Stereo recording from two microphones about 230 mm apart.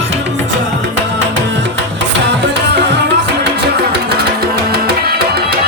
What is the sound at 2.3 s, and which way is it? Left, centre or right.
Tabla, right.